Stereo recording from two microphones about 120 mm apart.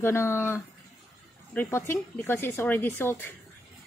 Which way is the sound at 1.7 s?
20° left (ahead or behind).